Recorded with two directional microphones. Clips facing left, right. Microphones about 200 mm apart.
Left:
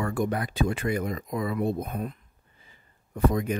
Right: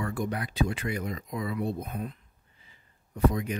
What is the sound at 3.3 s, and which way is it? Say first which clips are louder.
Speech: left 4 dB; 45° left (ahead or behind).